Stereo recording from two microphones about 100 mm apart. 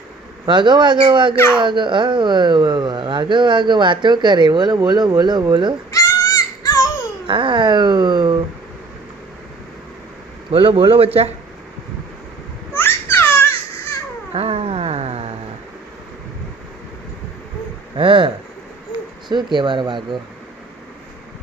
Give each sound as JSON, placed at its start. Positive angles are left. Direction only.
{"t": 0.4, "sound": "speech", "side_deg": -50}
{"t": 5.9, "sound": "a sound", "side_deg": 35}
{"t": 7.3, "sound": "speech", "side_deg": -55}
{"t": 10.5, "sound": "a man's voice", "side_deg": -60}
{"t": 12.7, "sound": "babbling", "side_deg": 25}
{"t": 14.3, "sound": "a sound", "side_deg": -80}
{"t": 17.9, "sound": "a man's voice", "side_deg": -60}
{"t": 19.3, "sound": "speech", "side_deg": -50}